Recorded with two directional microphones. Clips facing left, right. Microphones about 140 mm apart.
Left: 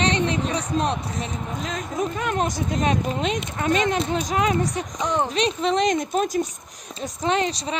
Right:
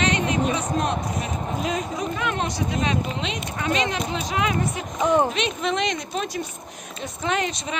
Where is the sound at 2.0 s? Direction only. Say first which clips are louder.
Left 2 dB; 40° left (ahead or behind).